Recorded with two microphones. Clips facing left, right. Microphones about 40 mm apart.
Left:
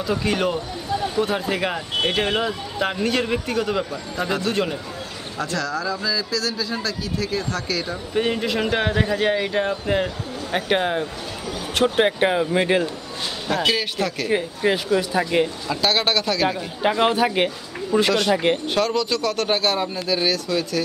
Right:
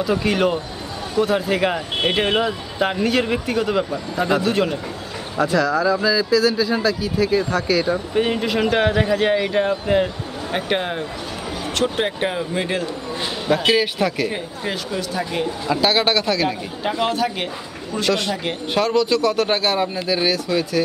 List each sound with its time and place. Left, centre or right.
0.0 s a man's voice: centre
13.5 s speech: centre
14.3 s speech: centre
15.6 s a man's voice: centre
16.8 s a man's voice: left
18.7 s speech: centre